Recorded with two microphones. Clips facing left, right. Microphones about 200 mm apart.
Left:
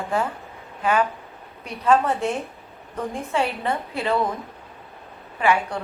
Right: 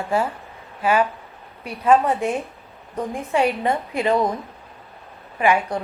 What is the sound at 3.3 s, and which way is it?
Speech, 15° right (ahead or behind).